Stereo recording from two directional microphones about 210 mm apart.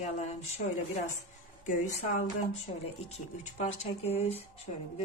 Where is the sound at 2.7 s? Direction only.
35° left (ahead or behind).